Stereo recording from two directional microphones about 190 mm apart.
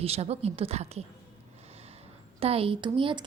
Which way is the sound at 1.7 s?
35° right (ahead or behind).